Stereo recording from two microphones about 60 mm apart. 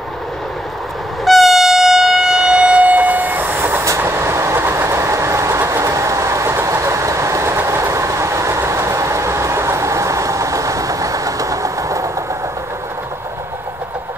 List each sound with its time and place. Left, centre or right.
1.2 s train: centre; by 3.8 s right
3.8 s train: right